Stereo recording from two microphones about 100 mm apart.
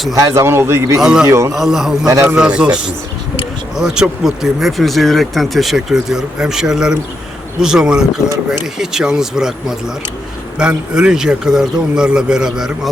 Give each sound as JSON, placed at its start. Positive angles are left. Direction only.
{"t": 0.2, "sound": "a man's voice", "side_deg": -30}
{"t": 1.0, "sound": "a man's voice", "side_deg": -5}
{"t": 1.3, "sound": "a man's voice", "side_deg": -30}
{"t": 1.5, "sound": "speech", "side_deg": -5}
{"t": 2.0, "sound": "a man's voice", "side_deg": -35}
{"t": 2.3, "sound": "a man's voice", "side_deg": -10}